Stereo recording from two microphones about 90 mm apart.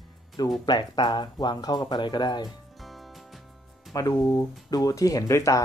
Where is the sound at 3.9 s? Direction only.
40° left (ahead or behind).